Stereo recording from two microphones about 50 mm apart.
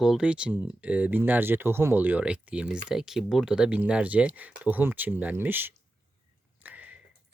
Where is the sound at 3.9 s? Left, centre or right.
Right.